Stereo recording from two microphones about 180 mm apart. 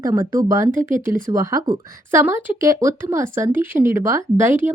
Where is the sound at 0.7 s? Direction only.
45° right (ahead or behind).